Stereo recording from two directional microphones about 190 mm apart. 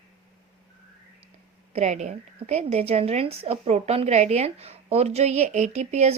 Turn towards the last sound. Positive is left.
turn(degrees=-35)  # may be behind; listen again after turning